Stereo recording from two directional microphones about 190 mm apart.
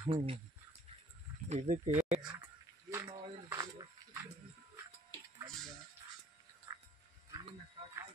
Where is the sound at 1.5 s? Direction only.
35° right (ahead or behind).